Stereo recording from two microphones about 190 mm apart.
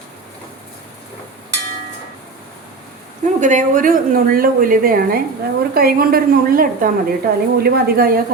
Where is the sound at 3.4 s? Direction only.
40° right (ahead or behind).